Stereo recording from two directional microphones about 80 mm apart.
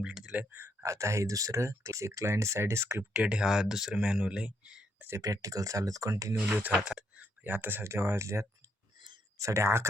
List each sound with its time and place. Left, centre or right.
0.0 s speech: centre
0.5 s speech: right
3.1 s speech: centre
5.0 s speech: right
6.5 s speech: right
6.8 s a sound: centre
7.4 s speech: right